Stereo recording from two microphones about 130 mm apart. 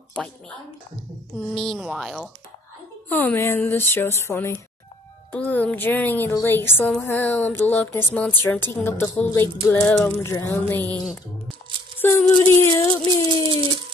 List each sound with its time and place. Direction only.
0.2 s a woman's voice: 5° left (ahead or behind)
1.5 s a woman's voice: 5° left (ahead or behind)
3.1 s speech: 15° left (ahead or behind)
9.2 s a sound: 20° left (ahead or behind)
10.0 s speech: 15° left (ahead or behind)
12.0 s a sound: 15° left (ahead or behind)